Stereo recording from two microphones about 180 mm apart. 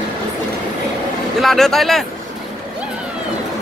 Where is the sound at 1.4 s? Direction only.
Centre (ahead or behind).